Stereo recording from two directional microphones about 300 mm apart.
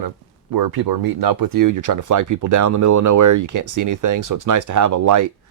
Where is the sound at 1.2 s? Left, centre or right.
Right.